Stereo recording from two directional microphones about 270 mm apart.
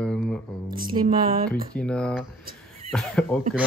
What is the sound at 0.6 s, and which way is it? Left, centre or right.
Speech, right.